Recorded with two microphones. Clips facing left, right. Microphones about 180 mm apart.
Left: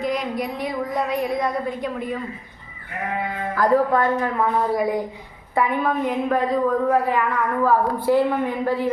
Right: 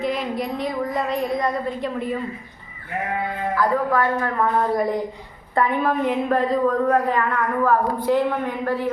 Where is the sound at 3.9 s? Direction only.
20° left (ahead or behind).